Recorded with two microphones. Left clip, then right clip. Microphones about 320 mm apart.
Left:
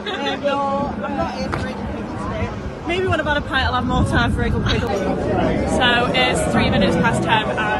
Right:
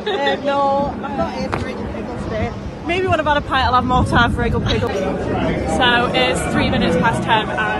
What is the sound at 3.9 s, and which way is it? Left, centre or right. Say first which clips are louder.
Speech: right 4 dB; centre.